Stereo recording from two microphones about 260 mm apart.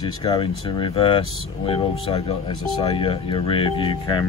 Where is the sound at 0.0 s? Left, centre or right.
Centre.